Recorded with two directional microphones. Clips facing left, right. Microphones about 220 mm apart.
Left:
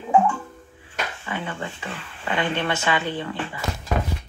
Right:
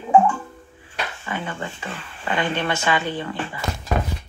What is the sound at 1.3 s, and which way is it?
Speech, 40° right (ahead or behind).